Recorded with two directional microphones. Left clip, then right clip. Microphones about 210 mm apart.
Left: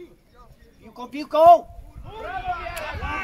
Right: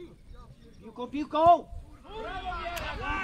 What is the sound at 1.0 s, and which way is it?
Speech, 50° left (ahead or behind).